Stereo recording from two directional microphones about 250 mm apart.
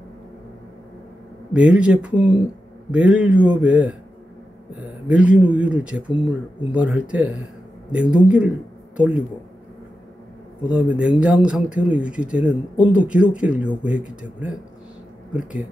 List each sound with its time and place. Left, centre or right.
1.5 s speech: centre
2.1 s speech: centre
2.9 s speech: centre
10.7 s speech: centre